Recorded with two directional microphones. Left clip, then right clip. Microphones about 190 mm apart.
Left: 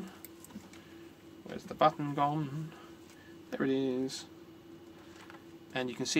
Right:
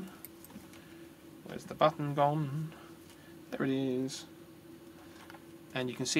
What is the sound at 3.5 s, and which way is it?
Speech, centre (ahead or behind).